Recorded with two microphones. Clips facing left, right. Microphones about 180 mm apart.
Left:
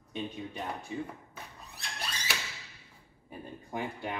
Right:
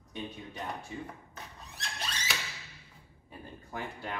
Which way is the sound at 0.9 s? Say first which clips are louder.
Left 4 dB; 20° left (ahead or behind).